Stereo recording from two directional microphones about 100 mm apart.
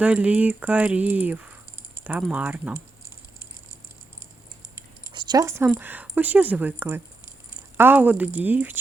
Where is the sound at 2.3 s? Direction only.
15° right (ahead or behind).